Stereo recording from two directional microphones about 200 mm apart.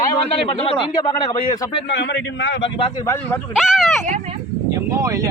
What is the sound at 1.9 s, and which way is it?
Speech, 60° left (ahead or behind).